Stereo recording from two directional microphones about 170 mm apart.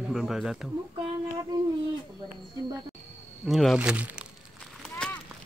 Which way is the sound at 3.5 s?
Centre (ahead or behind).